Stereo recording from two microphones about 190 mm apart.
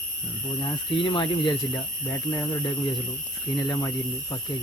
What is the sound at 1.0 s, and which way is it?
Speech, 25° left (ahead or behind).